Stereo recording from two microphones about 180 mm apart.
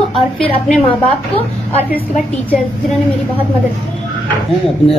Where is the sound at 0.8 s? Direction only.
30° left (ahead or behind).